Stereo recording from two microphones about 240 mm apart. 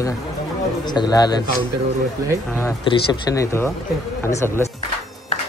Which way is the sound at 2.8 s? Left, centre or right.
Centre.